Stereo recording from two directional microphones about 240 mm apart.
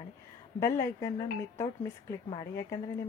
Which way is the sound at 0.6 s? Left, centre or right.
Centre.